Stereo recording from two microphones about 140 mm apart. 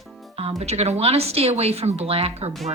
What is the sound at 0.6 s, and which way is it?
Speech, 50° right (ahead or behind).